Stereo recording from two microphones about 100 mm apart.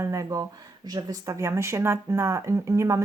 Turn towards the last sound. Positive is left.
turn(degrees=-30)  # may be behind; listen again after turning